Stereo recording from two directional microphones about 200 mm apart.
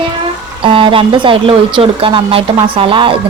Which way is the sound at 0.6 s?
25° right (ahead or behind).